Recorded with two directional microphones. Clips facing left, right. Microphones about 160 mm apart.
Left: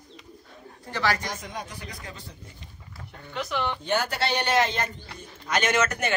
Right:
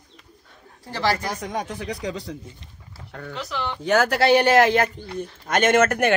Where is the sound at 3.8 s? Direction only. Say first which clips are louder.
Right 13 dB; 85° right; by 4.8 s 70° right (ahead or behind).